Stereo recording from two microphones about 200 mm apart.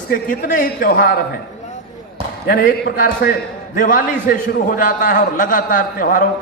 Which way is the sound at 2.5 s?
45° left (ahead or behind).